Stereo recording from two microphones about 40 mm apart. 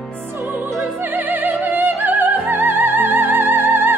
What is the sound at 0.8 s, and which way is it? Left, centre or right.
Music, right.